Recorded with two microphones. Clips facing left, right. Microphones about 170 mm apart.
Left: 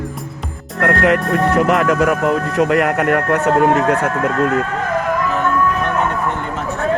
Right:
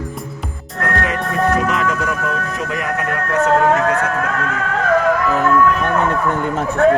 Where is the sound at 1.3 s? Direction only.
65° left (ahead or behind).